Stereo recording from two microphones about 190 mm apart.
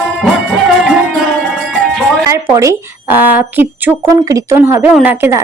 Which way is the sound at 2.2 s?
15° right (ahead or behind).